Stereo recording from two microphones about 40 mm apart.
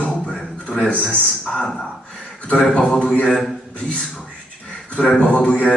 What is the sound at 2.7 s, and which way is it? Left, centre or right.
Speech, left.